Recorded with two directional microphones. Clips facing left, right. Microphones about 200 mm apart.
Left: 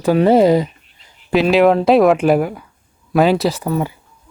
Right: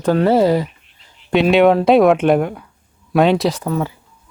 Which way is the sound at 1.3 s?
Centre (ahead or behind).